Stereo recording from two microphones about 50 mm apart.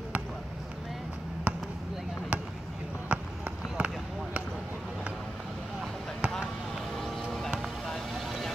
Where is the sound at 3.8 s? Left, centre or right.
Right.